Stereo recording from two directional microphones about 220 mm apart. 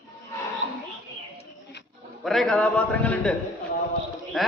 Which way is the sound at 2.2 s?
Centre (ahead or behind).